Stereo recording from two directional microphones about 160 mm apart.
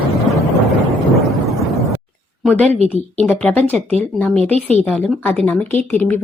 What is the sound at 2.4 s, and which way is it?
A woman's voice, 10° left (ahead or behind).